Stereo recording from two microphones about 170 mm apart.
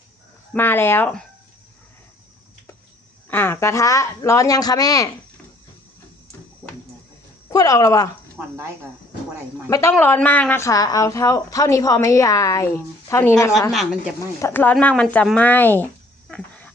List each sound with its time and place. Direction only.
0.5 s speech: 10° left (ahead or behind)
3.2 s a woman's voice: 15° left (ahead or behind)
7.5 s a woman's voice: 20° left (ahead or behind)
9.6 s a woman's voice: 15° left (ahead or behind)
14.4 s speech: 10° left (ahead or behind)
16.3 s dog: 5° left (ahead or behind)